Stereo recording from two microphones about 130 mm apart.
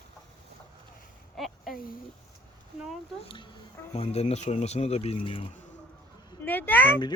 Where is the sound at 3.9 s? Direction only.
55° left (ahead or behind).